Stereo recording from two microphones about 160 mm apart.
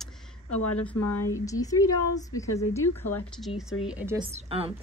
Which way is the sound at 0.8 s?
20° left (ahead or behind).